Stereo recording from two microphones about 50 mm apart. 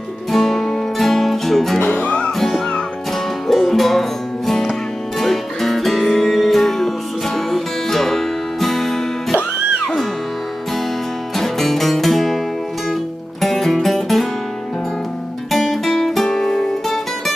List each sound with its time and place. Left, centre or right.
0.3 s music: centre
1.9 s music: left
2.3 s music: centre
11.3 s music: centre
13.4 s music: centre
15.5 s guitar: centre